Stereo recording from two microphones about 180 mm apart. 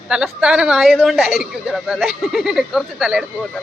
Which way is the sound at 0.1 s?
5° right (ahead or behind).